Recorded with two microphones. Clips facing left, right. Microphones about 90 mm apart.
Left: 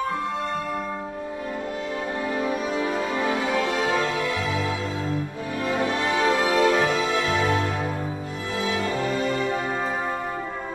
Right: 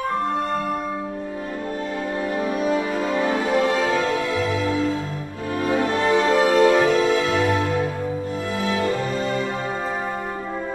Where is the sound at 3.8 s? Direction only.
Centre (ahead or behind).